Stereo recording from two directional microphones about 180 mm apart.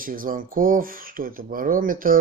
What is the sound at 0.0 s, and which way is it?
Speech, 50° right (ahead or behind).